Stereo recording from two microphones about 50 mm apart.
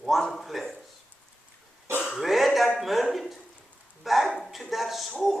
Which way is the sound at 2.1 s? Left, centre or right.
Centre.